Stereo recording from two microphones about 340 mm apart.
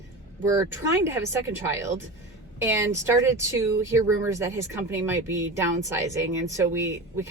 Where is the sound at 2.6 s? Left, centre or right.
Centre.